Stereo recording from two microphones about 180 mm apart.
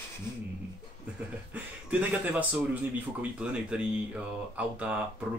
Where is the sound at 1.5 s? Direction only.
10° right (ahead or behind).